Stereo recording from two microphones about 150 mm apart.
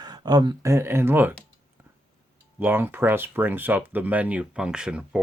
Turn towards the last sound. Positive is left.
turn(degrees=-5)  # may be behind; listen again after turning